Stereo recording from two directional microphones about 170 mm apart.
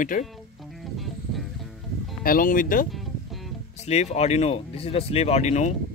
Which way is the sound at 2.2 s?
55° left (ahead or behind).